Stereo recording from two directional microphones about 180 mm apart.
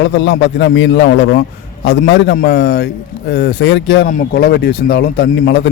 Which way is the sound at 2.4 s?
65° left (ahead or behind).